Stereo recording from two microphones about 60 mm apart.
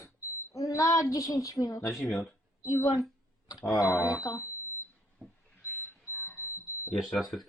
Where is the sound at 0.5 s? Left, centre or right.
Left.